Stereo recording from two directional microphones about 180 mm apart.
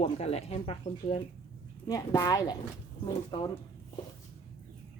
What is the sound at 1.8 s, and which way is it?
Speech, 20° left (ahead or behind).